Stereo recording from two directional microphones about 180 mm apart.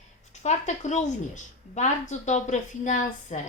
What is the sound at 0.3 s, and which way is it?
A woman's voice, 40° left (ahead or behind).